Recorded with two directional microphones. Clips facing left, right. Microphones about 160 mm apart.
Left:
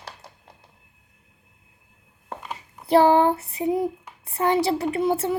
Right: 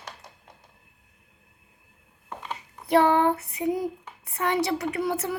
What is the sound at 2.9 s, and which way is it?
A woman's voice, 30° left (ahead or behind).